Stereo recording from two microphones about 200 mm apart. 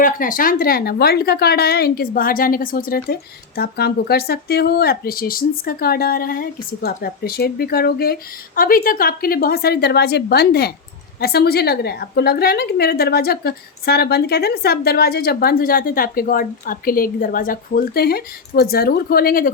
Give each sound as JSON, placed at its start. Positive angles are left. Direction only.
{"t": 0.0, "sound": "speech", "side_deg": 45}